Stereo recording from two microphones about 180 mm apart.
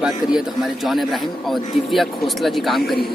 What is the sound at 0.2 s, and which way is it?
Speech, 20° left (ahead or behind).